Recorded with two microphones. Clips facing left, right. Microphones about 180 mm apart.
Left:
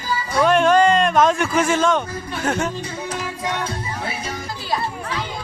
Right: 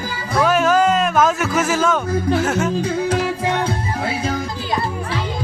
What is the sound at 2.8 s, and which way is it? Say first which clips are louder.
Music: right 9 dB; 90° right.